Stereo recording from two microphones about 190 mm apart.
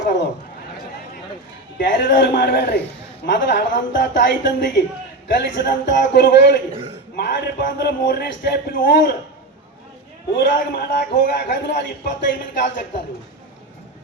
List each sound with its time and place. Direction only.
1.8 s speech: 65° left (ahead or behind)
3.2 s a woman's voice: 65° left (ahead or behind)
10.3 s a woman's voice: 65° left (ahead or behind)